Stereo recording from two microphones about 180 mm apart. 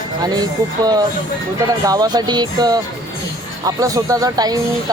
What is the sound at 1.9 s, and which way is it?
Speech, 20° right (ahead or behind).